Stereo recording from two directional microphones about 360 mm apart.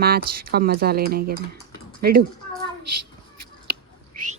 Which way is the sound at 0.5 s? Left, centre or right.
Right.